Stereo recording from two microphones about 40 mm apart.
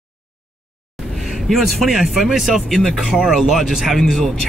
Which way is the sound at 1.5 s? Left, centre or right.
Centre.